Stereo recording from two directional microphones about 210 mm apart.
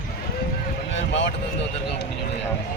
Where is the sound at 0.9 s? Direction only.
60° left (ahead or behind).